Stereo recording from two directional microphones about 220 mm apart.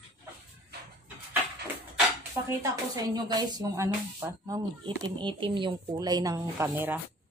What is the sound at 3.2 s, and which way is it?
A woman's voice, 20° right (ahead or behind).